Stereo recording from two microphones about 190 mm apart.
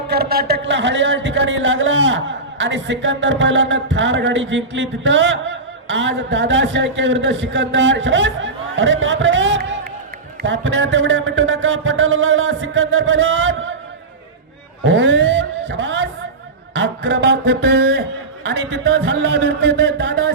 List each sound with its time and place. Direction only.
0.1 s a man's voice: 55° right (ahead or behind); by 13.7 s 75° right (ahead or behind)
14.8 s vehicle: 75° right (ahead or behind)
16.7 s a sound: 65° right (ahead or behind)